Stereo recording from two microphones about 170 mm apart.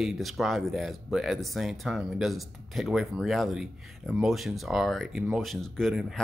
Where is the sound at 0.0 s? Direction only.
Centre (ahead or behind).